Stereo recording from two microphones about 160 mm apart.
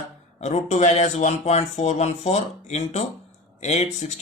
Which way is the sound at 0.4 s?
45° left (ahead or behind).